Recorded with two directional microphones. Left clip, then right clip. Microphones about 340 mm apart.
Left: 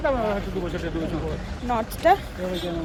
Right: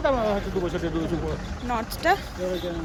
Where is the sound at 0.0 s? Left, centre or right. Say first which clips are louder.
Even; right.